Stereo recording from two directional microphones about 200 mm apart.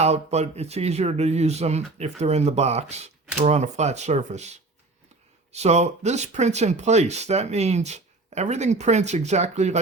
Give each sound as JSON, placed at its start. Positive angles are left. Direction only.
{"t": 0.0, "sound": "speech", "side_deg": -30}